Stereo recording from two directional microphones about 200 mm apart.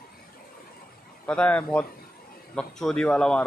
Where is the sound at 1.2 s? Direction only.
5° left (ahead or behind).